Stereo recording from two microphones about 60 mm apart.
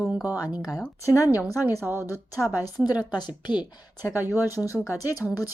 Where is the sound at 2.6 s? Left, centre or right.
Left.